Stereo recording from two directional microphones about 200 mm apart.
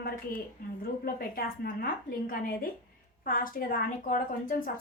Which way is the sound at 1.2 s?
50° left (ahead or behind).